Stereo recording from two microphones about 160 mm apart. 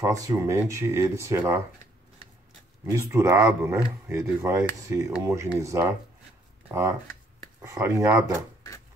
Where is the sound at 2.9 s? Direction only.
20° right (ahead or behind).